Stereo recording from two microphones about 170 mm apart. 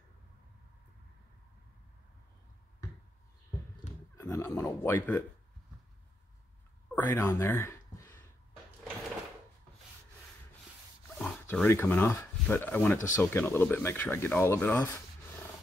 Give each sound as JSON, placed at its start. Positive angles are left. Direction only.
{"t": 3.8, "sound": "a sound", "side_deg": 40}
{"t": 4.2, "sound": "speech", "side_deg": 15}
{"t": 7.1, "sound": "speech", "side_deg": 15}
{"t": 11.1, "sound": "dog", "side_deg": 5}
{"t": 11.8, "sound": "speech", "side_deg": 10}